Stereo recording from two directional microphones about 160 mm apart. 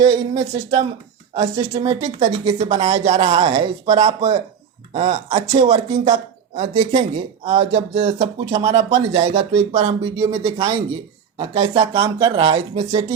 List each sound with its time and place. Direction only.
0.1 s a woman's voice: 30° right (ahead or behind)
2.1 s speech: 40° right (ahead or behind)
3.5 s a woman's voice: 25° right (ahead or behind)
3.9 s speech: 40° right (ahead or behind)